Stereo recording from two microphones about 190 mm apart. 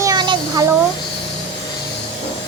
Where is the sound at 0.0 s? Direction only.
20° right (ahead or behind).